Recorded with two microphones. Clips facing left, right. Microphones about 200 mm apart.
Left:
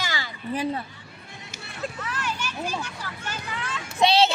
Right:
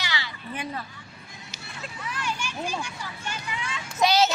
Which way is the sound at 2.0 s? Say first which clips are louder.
Left 1 dB; 10° right (ahead or behind).